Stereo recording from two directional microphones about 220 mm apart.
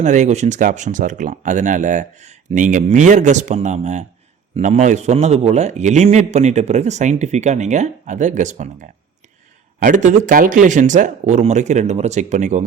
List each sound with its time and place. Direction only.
0.0 s a man's voice: 30° right (ahead or behind)